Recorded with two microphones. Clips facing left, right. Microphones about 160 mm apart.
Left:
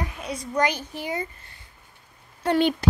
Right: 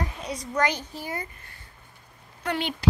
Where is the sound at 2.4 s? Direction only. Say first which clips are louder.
Left 8 dB; 35° left (ahead or behind).